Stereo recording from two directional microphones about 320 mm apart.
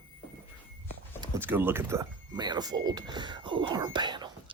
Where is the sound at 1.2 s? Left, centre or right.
Centre.